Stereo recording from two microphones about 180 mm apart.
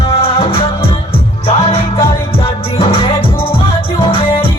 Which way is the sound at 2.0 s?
30° left (ahead or behind).